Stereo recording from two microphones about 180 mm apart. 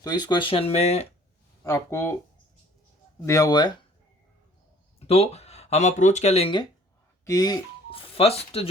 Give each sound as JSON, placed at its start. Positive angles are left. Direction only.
{"t": 0.0, "sound": "speech", "side_deg": 25}
{"t": 1.6, "sound": "speech", "side_deg": 15}
{"t": 3.2, "sound": "speech", "side_deg": 20}
{"t": 4.9, "sound": "speech", "side_deg": 35}